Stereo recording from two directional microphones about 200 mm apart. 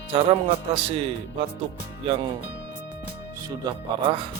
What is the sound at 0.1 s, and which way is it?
Speech, 25° right (ahead or behind).